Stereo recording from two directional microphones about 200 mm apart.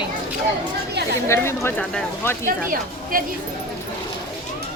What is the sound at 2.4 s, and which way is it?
Speech, 45° right (ahead or behind).